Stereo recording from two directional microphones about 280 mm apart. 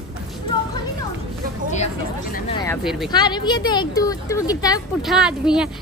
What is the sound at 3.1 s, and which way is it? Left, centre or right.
Speech, centre.